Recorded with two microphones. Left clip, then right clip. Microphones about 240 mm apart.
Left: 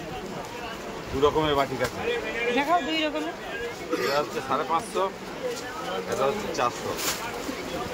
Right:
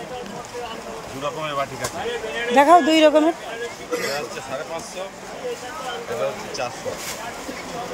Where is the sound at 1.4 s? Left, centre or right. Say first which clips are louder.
Left 1 dB; left.